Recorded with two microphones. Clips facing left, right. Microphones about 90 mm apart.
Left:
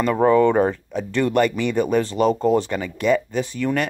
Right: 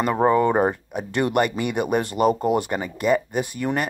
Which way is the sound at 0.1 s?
25° right (ahead or behind).